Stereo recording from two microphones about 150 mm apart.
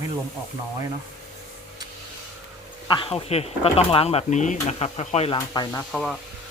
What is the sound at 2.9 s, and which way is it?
Speech, 35° left (ahead or behind).